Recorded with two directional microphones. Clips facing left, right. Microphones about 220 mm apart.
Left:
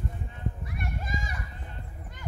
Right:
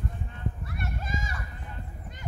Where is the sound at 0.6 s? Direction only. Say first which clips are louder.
Even; 15° left (ahead or behind).